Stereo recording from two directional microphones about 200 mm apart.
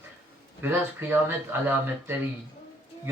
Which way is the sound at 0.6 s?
10° right (ahead or behind).